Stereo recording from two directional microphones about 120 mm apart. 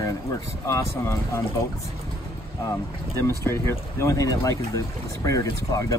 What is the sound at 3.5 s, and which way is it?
Speech, 25° left (ahead or behind).